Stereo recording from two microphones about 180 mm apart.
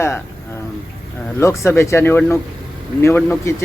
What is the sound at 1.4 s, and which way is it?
Speech, 15° left (ahead or behind).